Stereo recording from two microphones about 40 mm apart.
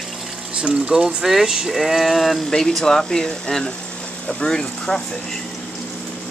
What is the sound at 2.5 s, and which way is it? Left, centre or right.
Speech, centre.